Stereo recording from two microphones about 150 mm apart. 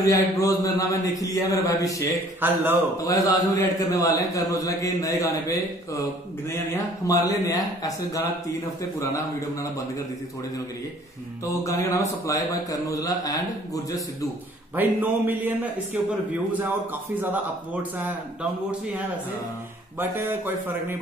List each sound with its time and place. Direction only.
0.0 s a man's voice: 20° left (ahead or behind)
2.4 s speech: 15° right (ahead or behind)
3.0 s a man's voice: 20° left (ahead or behind)
6.7 s a man's voice: 20° left (ahead or behind)
11.6 s a man's voice: 20° left (ahead or behind)
14.8 s speech: 10° right (ahead or behind)
17.9 s speech: 10° right (ahead or behind)
20.0 s speech: 15° right (ahead or behind)